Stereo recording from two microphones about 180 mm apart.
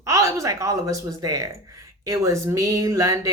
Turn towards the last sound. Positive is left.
turn(degrees=-20)  # may be behind; listen again after turning